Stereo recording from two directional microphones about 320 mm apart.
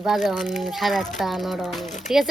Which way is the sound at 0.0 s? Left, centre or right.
Centre.